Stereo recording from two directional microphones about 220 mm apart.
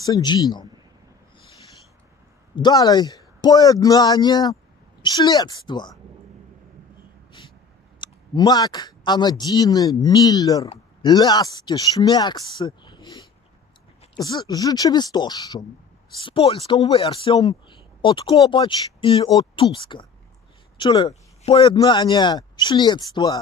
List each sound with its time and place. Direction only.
0.0 s speech: 20° left (ahead or behind)
2.5 s speech: 20° left (ahead or behind)
8.0 s speech: 20° left (ahead or behind)